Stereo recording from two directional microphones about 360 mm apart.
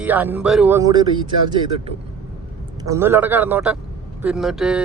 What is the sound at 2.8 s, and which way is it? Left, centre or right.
Speech, centre.